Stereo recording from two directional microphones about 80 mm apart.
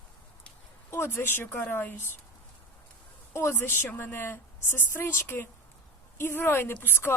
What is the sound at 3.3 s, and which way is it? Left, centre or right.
A woman's voice, left.